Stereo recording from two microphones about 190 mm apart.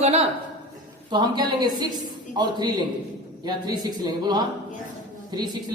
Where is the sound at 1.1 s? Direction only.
20° right (ahead or behind).